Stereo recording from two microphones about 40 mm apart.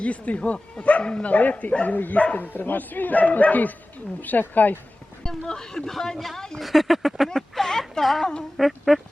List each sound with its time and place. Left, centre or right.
0.0 s speech: left
5.5 s speech: centre
6.6 s speech: centre
7.5 s speech: centre